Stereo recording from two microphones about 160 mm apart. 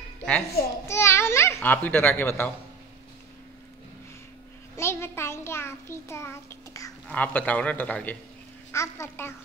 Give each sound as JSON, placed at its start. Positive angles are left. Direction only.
{"t": 0.8, "sound": "babbling", "side_deg": 15}
{"t": 4.7, "sound": "a sound", "side_deg": 15}
{"t": 7.1, "sound": "a man's voice", "side_deg": 10}